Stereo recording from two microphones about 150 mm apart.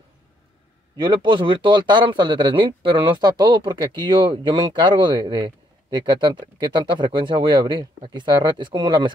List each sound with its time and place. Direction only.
0.9 s speech: 35° right (ahead or behind)